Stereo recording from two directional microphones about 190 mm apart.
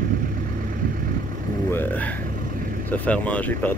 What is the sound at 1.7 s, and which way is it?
Speech, 10° left (ahead or behind).